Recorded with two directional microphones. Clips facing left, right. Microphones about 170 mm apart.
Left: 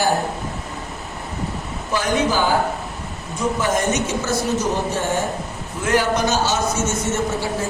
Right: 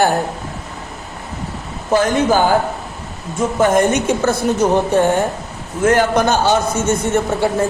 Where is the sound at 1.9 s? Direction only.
50° right (ahead or behind).